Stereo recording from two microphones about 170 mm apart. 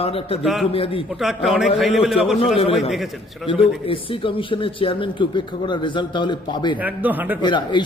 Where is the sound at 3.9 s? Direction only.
30° left (ahead or behind).